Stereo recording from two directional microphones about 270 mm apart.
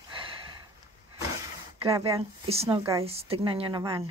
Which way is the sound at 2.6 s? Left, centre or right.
Centre.